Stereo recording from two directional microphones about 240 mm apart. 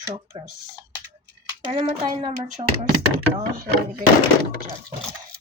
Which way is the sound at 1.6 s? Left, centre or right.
Right.